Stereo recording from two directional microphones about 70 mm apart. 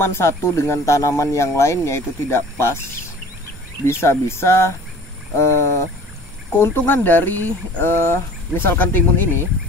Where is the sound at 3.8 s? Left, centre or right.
Left.